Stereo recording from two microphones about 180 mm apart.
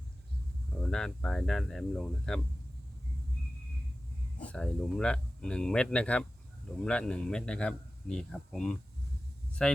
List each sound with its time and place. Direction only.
0.8 s a man's voice: 5° left (ahead or behind)
4.4 s a man's voice: 5° left (ahead or behind)